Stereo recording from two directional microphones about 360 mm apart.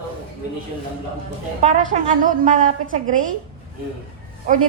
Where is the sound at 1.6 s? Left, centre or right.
Right.